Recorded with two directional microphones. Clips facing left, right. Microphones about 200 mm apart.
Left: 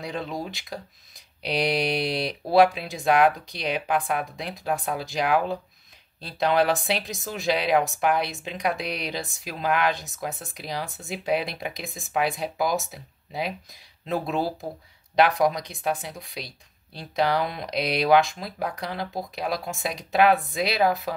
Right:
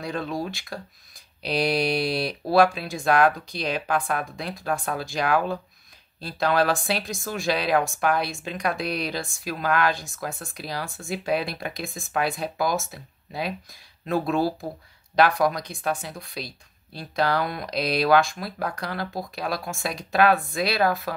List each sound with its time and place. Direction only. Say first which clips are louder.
0.0 s speech: right 2 dB; 20° left (ahead or behind)